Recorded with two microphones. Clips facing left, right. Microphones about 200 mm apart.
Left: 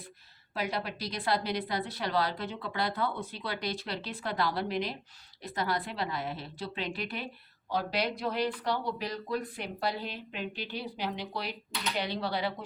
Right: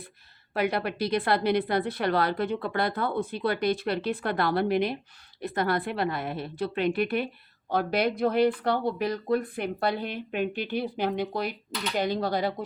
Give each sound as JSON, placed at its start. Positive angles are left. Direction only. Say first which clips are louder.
{"t": 0.5, "sound": "a woman's voice", "louder": "right 7 dB", "side_deg": -60}